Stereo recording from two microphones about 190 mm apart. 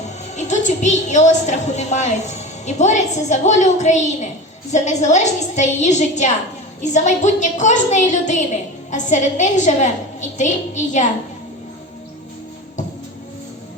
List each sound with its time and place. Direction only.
0.3 s a woman's voice: 40° left (ahead or behind)